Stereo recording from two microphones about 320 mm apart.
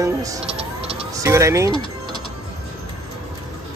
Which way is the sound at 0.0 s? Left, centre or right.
Centre.